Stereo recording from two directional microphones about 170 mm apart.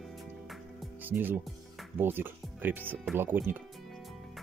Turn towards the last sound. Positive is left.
turn(degrees=-10)  # may be behind; listen again after turning